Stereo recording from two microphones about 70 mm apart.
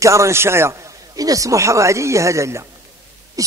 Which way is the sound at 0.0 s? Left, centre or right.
Right.